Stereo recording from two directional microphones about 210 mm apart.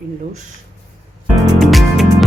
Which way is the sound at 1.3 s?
Centre (ahead or behind).